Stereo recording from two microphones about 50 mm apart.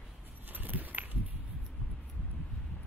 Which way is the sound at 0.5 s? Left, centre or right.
Right.